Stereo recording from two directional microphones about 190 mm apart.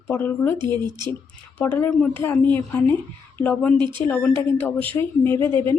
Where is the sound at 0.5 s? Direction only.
25° right (ahead or behind).